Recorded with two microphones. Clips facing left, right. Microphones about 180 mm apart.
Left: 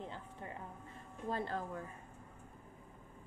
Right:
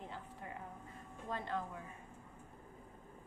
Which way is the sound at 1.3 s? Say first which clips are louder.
Left 2 dB; 35° left (ahead or behind).